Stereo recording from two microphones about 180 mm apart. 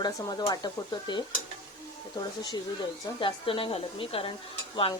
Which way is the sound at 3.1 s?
30° left (ahead or behind).